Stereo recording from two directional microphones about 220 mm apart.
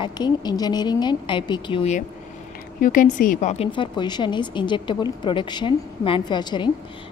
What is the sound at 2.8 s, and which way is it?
Speech, 35° left (ahead or behind).